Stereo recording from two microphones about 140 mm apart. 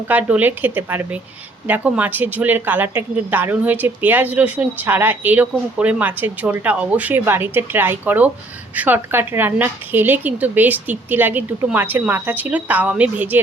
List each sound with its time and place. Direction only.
0.1 s speech: 10° right (ahead or behind)